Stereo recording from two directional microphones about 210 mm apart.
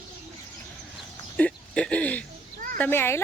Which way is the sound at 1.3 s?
5° left (ahead or behind).